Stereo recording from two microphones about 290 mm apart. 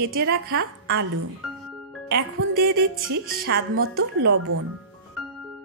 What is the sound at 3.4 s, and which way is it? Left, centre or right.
Speech, right.